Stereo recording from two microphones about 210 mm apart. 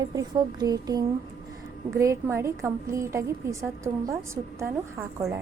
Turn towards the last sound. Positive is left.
turn(degrees=-10)  # may be behind; listen again after turning